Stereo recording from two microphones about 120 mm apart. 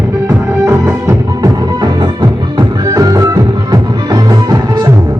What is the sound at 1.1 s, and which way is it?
Music, 30° right (ahead or behind).